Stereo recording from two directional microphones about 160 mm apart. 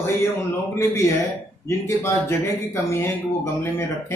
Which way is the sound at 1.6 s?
15° left (ahead or behind).